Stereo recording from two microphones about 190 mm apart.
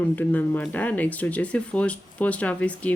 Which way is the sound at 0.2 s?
10° left (ahead or behind).